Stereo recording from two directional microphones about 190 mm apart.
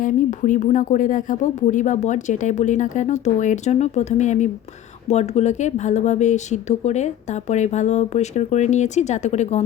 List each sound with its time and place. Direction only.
0.0 s speech: 40° left (ahead or behind)